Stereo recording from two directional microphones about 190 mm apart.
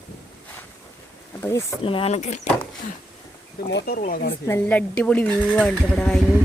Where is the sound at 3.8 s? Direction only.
50° left (ahead or behind).